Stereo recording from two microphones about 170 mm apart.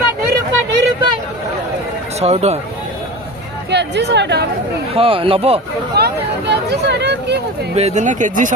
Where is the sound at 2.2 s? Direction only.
40° right (ahead or behind).